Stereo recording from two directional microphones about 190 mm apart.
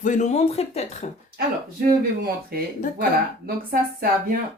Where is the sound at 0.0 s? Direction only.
40° left (ahead or behind).